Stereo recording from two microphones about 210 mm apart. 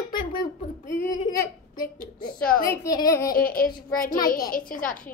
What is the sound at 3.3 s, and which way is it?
A woman's voice, 40° left (ahead or behind).